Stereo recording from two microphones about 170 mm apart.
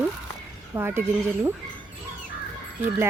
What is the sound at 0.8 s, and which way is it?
Speech, 15° right (ahead or behind).